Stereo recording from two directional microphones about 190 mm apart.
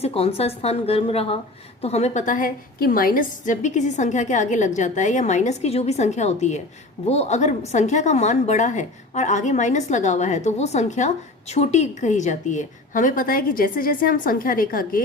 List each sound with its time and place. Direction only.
0.0 s a woman's voice: 30° left (ahead or behind); by 15.0 s 45° left (ahead or behind)